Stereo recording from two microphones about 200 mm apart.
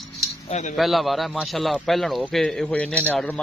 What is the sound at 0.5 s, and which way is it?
Speech, 35° left (ahead or behind).